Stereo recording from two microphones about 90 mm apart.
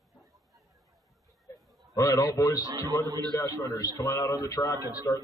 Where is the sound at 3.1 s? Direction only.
50° right (ahead or behind).